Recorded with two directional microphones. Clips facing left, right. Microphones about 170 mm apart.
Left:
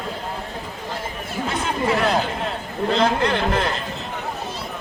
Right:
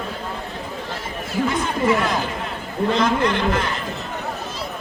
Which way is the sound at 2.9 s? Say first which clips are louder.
Left 1 dB; 35° left (ahead or behind).